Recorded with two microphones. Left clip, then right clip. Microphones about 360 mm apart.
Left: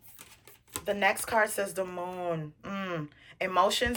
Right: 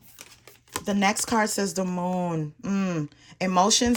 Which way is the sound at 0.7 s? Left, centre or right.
Centre.